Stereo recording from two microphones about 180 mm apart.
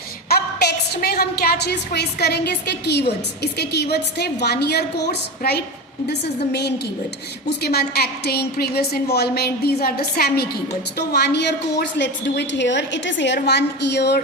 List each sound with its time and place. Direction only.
0.3 s a woman's voice: 60° left (ahead or behind)